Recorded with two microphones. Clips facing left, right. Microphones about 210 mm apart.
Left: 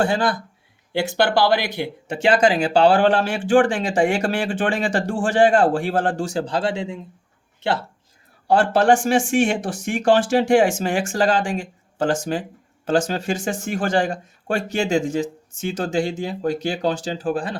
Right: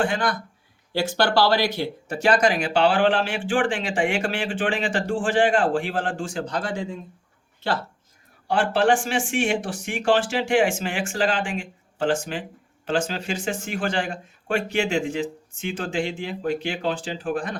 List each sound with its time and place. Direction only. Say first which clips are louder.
0.0 s speech: left 4 dB; 35° left (ahead or behind)
1.3 s speech: left 1 dB; 20° left (ahead or behind)
8.4 s speech: left 4 dB; 40° left (ahead or behind)